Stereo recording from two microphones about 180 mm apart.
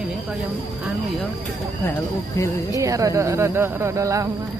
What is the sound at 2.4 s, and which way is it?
Speech, 20° left (ahead or behind).